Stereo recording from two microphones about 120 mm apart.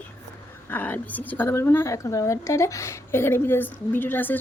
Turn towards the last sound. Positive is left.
turn(degrees=15)  # may be behind; listen again after turning